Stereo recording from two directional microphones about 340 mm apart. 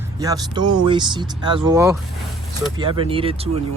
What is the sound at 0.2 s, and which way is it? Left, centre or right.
Speech, centre.